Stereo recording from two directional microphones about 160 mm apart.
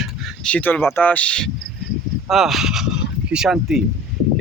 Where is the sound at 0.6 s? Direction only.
10° left (ahead or behind).